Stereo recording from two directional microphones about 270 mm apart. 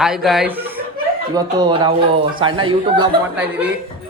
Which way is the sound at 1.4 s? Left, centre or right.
Centre.